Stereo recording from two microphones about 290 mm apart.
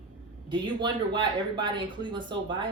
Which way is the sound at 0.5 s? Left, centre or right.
Centre.